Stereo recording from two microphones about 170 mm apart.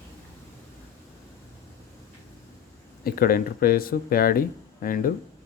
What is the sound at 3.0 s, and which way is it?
Speech, 60° left (ahead or behind).